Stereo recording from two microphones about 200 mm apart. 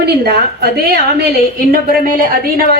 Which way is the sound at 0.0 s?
55° right (ahead or behind).